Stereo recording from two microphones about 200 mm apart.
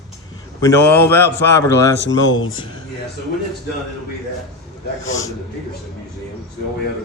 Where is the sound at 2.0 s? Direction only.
75° left (ahead or behind).